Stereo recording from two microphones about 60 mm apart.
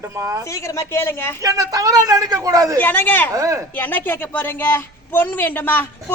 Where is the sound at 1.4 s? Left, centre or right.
Right.